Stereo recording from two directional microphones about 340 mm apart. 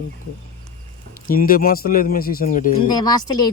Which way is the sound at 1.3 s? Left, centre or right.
Left.